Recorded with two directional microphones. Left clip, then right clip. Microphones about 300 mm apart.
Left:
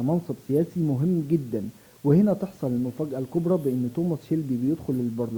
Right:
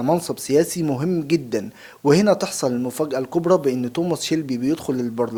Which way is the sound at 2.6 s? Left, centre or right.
Centre.